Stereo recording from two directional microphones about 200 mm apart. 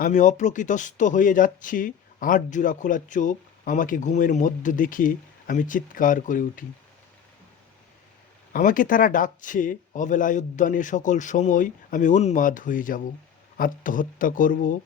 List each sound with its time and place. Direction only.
0.0 s speech: 40° left (ahead or behind)
8.5 s speech: 45° left (ahead or behind)